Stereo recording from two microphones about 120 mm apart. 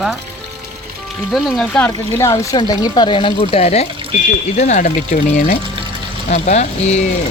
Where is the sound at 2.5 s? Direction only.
35° left (ahead or behind); by 3.9 s 60° left (ahead or behind).